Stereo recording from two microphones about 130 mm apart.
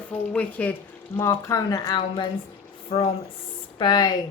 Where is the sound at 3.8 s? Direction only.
35° left (ahead or behind).